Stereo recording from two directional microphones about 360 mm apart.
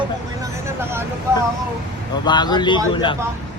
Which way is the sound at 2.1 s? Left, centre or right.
Centre.